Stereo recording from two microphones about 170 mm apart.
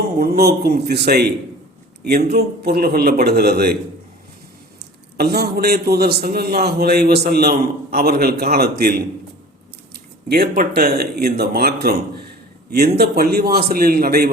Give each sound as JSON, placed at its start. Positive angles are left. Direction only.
{"t": 0.2, "sound": "a man's voice", "side_deg": -65}
{"t": 2.3, "sound": "a man's voice", "side_deg": -65}
{"t": 5.1, "sound": "a man's voice", "side_deg": -65}
{"t": 10.2, "sound": "a man's voice", "side_deg": -70}